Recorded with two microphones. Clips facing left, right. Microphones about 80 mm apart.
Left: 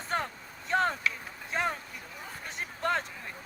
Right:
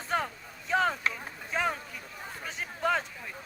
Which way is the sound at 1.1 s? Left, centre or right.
Right.